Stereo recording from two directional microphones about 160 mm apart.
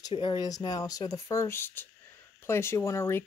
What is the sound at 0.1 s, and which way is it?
Speech, 30° left (ahead or behind).